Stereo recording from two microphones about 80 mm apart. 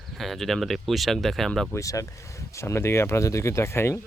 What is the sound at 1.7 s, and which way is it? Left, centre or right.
Speech, left.